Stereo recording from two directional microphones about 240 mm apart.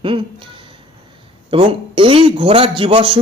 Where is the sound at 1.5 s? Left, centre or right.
Right.